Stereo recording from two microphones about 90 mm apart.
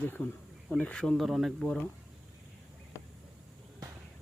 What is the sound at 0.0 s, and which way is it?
Speech, 15° left (ahead or behind).